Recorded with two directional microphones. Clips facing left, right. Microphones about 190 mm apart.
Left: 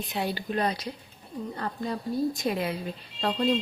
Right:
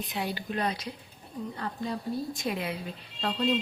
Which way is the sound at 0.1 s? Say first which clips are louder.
Left 5 dB; 35° left (ahead or behind).